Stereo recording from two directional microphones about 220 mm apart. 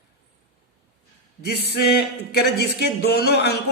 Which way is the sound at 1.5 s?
45° left (ahead or behind).